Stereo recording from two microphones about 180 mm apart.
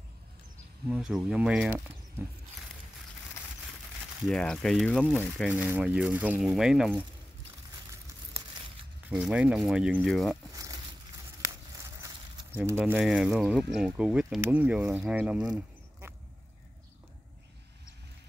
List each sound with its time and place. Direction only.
0.8 s speech: 5° right (ahead or behind)
4.3 s speech: 5° left (ahead or behind)
5.5 s speech: 10° right (ahead or behind)
9.1 s speech: 5° right (ahead or behind)
10.5 s a sound: 20° right (ahead or behind)
12.5 s speech: 10° right (ahead or behind)